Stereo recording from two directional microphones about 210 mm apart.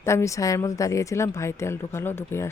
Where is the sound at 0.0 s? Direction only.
15° left (ahead or behind).